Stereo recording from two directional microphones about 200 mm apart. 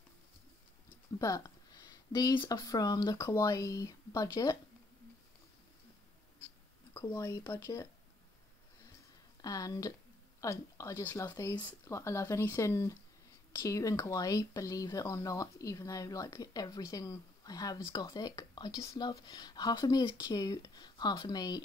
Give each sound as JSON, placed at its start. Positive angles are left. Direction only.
{"t": 1.2, "sound": "speech", "side_deg": 15}
{"t": 6.9, "sound": "speech", "side_deg": 15}
{"t": 9.4, "sound": "speech", "side_deg": 15}